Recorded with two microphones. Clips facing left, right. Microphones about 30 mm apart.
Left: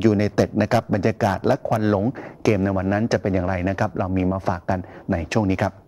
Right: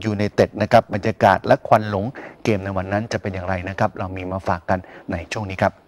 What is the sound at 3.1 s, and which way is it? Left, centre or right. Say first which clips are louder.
Speech: left 3 dB; right.